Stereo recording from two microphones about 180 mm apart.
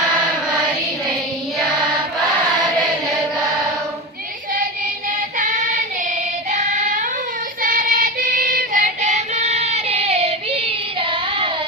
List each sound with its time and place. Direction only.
6.5 s child singing: 45° right (ahead or behind)